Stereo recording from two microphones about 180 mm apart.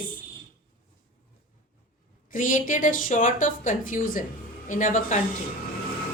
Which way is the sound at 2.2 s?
45° left (ahead or behind).